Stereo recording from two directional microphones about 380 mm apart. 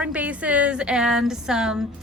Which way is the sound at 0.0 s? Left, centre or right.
Centre.